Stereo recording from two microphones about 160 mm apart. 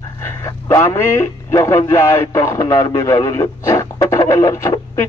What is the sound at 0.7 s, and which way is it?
Speech, 15° left (ahead or behind).